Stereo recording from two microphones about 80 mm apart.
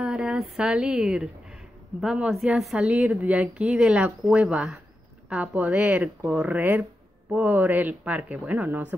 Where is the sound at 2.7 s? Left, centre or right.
Centre.